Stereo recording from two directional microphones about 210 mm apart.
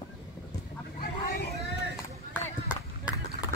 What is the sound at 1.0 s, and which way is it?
Vehicle, 45° left (ahead or behind).